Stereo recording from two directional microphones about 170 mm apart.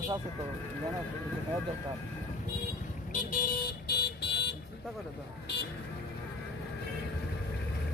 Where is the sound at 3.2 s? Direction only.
60° left (ahead or behind); by 4.5 s 80° left.